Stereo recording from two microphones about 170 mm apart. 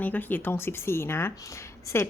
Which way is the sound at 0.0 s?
10° left (ahead or behind).